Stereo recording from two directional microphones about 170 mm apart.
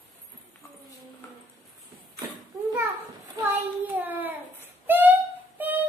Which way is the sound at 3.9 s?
10° right (ahead or behind).